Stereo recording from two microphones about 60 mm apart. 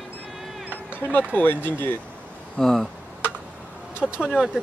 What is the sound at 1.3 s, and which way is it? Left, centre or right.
Speech, left.